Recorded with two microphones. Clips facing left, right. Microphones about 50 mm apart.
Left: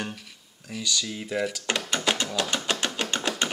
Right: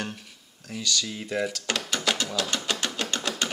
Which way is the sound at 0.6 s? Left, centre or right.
Centre.